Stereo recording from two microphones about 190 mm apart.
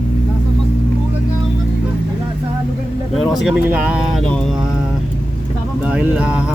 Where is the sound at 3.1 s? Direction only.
Centre (ahead or behind).